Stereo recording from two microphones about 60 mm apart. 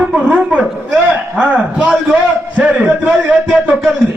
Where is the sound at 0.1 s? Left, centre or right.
Centre.